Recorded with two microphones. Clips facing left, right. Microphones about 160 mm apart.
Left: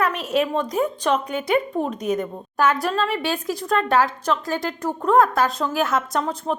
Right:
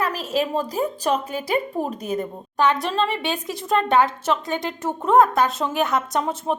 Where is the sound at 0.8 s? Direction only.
35° right (ahead or behind).